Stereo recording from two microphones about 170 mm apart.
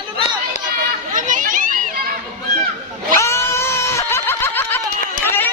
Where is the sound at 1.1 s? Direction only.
50° right (ahead or behind).